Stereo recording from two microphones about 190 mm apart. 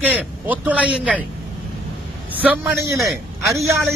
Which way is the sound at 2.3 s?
10° right (ahead or behind).